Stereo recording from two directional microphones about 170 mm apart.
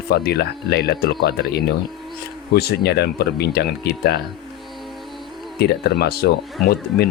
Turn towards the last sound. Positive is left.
turn(degrees=70)  # may be behind; listen again after turning